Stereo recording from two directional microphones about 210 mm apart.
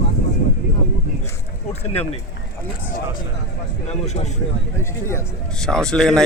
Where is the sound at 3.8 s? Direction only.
35° left (ahead or behind).